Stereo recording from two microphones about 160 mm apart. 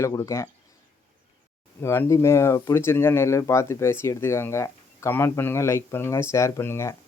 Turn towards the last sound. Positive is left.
turn(degrees=15)  # may be behind; listen again after turning